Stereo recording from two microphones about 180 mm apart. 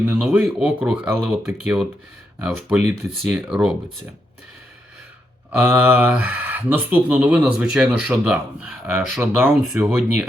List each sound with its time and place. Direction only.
0.0 s speech: 10° right (ahead or behind)
5.5 s speech: 10° right (ahead or behind)